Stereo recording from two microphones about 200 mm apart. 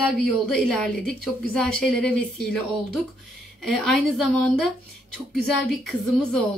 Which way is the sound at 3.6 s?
Centre (ahead or behind).